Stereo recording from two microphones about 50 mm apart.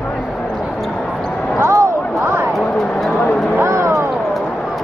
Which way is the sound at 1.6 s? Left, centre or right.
Right.